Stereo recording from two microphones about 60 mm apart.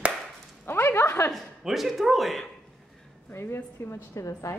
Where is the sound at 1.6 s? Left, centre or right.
Centre.